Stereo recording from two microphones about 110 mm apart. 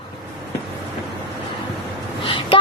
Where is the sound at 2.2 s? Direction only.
50° left (ahead or behind).